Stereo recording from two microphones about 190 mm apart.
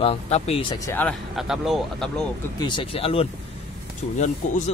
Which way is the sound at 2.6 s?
25° left (ahead or behind).